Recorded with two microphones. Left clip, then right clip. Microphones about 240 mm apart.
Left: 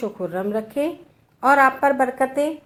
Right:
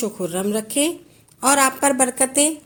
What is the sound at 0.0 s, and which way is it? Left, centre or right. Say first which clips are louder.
A woman's voice: right 1 dB; right.